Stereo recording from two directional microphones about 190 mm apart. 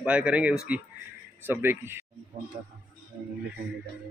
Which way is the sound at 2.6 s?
50° right (ahead or behind).